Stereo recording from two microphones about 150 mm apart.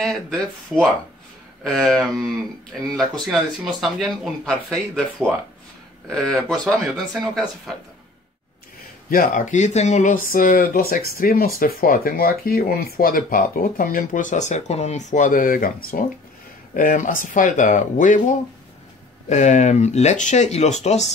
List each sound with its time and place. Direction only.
0.0 s speech: centre (ahead or behind)
9.1 s speech: 65° left (ahead or behind)
19.2 s speech: 50° left (ahead or behind)